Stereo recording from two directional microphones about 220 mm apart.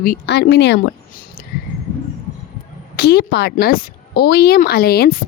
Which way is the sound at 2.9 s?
45° left (ahead or behind).